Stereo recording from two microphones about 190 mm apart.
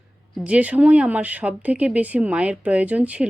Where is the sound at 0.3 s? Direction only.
5° right (ahead or behind).